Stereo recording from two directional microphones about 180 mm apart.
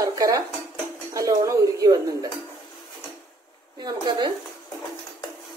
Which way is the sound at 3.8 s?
25° right (ahead or behind).